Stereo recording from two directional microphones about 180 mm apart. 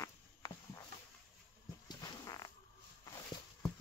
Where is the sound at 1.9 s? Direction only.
20° left (ahead or behind).